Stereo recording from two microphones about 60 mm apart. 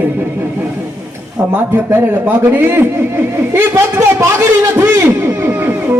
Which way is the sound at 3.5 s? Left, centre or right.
Right.